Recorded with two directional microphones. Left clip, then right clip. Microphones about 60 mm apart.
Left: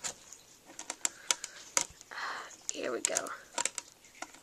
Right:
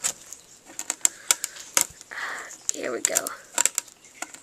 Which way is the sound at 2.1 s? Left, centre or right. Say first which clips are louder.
Right 7 dB; centre.